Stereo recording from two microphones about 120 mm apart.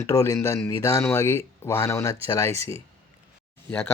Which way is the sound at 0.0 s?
25° left (ahead or behind).